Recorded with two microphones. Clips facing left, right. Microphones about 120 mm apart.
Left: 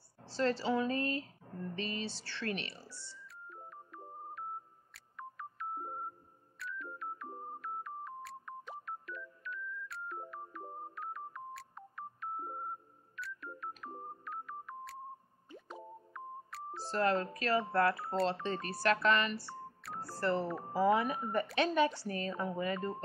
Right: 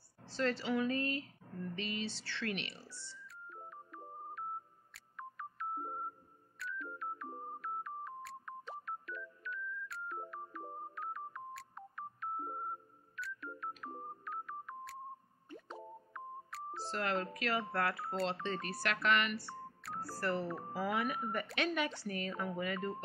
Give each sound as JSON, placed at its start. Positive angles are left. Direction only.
{"t": 0.2, "sound": "speech", "side_deg": 35}
{"t": 2.9, "sound": "a sound", "side_deg": 10}
{"t": 3.4, "sound": "music", "side_deg": 0}
{"t": 4.9, "sound": "telephone dialing", "side_deg": 0}
{"t": 6.6, "sound": "music", "side_deg": 0}
{"t": 16.8, "sound": "speech", "side_deg": 35}
{"t": 19.8, "sound": "telephone dialing", "side_deg": 0}
{"t": 20.2, "sound": "speech", "side_deg": 25}